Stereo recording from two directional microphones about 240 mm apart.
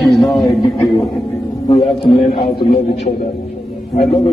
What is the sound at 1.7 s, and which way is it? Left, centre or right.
A man's voice, left.